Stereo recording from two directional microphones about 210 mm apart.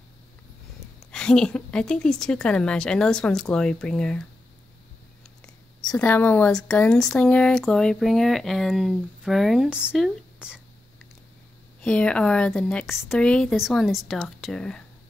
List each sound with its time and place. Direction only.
1.1 s speech: 5° left (ahead or behind)
5.9 s speech: 5° left (ahead or behind)
11.8 s speech: 5° left (ahead or behind)